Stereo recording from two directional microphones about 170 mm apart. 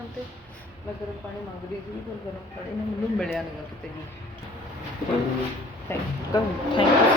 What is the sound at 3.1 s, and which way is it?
Speech, 5° left (ahead or behind).